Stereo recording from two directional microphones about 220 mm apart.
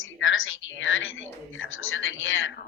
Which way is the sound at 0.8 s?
60° left (ahead or behind).